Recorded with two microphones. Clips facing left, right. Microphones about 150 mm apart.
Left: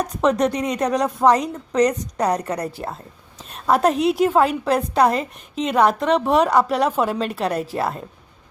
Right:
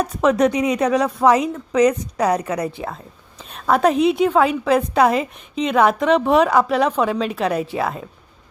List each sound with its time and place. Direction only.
0.0 s a woman's voice: 5° right (ahead or behind)